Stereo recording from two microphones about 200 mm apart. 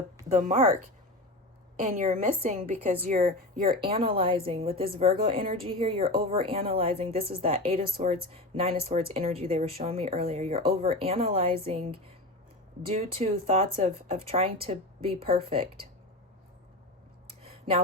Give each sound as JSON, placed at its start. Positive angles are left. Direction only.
{"t": 0.3, "sound": "a woman's voice", "side_deg": -40}
{"t": 3.8, "sound": "a woman's voice", "side_deg": -25}
{"t": 17.4, "sound": "a sound", "side_deg": -30}